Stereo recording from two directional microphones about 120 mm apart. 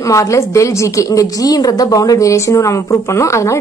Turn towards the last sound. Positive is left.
turn(degrees=25)  # may be behind; listen again after turning